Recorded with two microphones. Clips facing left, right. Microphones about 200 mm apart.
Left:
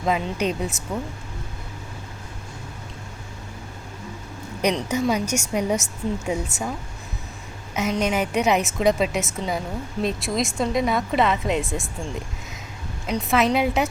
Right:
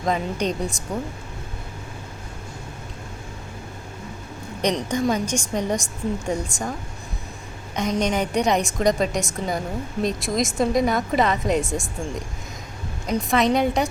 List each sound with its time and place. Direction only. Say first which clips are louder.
0.0 s a woman's voice: even; 5° left (ahead or behind)
4.6 s a woman's voice: even; 5° left (ahead or behind)
7.8 s a woman's voice: even; 5° left (ahead or behind)
13.1 s a woman's voice: right 1 dB; 5° left (ahead or behind)